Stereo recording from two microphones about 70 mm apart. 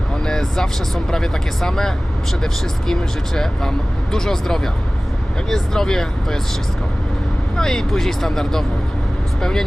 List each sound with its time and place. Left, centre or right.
0.3 s speech: centre
7.5 s speech: centre